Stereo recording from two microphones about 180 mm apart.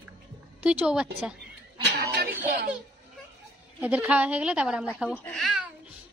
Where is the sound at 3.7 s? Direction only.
10° right (ahead or behind).